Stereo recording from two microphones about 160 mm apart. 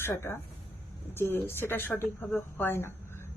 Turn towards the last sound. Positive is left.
turn(degrees=15)  # may be behind; listen again after turning